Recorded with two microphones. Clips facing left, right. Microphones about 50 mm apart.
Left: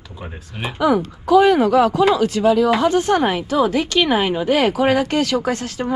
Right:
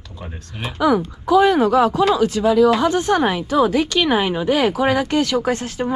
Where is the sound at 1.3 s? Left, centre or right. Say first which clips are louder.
Left 1 dB; left.